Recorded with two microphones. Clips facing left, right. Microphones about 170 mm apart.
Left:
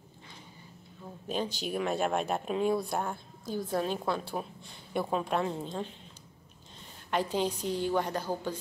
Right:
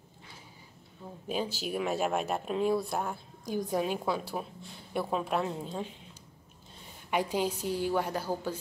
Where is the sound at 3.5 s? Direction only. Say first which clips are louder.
Right 1 dB; 15° right (ahead or behind).